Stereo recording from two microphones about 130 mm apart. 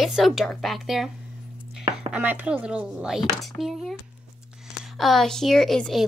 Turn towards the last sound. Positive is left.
turn(degrees=0)  # may be behind; listen again after turning